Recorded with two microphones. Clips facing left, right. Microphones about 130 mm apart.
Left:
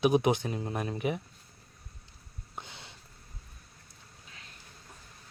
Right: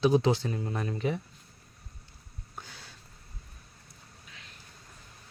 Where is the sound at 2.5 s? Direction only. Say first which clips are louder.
Left 2 dB; 20° left (ahead or behind).